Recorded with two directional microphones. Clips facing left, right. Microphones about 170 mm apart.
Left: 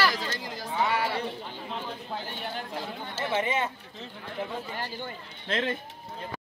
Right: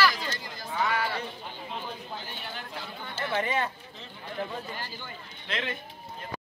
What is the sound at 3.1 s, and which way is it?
Speech, 20° left (ahead or behind).